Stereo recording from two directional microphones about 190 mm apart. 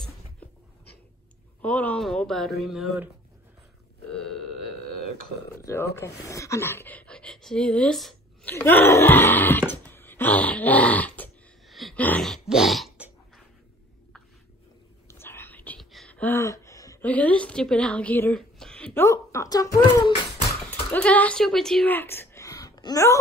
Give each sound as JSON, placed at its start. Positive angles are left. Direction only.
{"t": 1.6, "sound": "speech", "side_deg": 10}
{"t": 4.1, "sound": "burping", "side_deg": 5}
{"t": 5.6, "sound": "speech", "side_deg": 15}
{"t": 15.0, "sound": "whispering", "side_deg": 10}
{"t": 18.9, "sound": "speech", "side_deg": 15}